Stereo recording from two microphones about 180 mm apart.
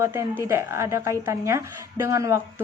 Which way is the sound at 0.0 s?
15° right (ahead or behind).